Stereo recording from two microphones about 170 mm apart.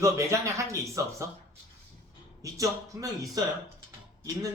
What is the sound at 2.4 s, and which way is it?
Speech, 20° right (ahead or behind).